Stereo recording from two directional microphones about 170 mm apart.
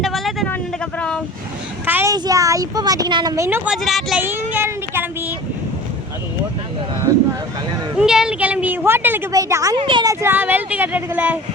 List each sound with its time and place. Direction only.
0.0 s vehicle: centre (ahead or behind)
0.4 s a sound: 10° left (ahead or behind)
1.9 s child singing: 10° right (ahead or behind)
2.1 s speech: 20° right (ahead or behind); by 4.2 s centre (ahead or behind)
4.2 s a woman's voice: 10° right (ahead or behind)
7.9 s a woman's voice: 5° right (ahead or behind)
9.7 s a woman's voice: 30° right (ahead or behind); by 11.3 s 10° right (ahead or behind)